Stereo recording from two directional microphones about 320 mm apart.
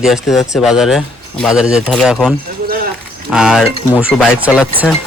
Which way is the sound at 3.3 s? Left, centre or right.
Centre.